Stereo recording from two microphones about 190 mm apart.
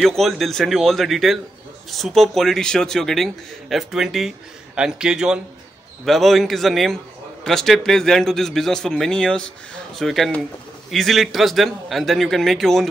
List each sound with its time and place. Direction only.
0.0 s speech: centre (ahead or behind)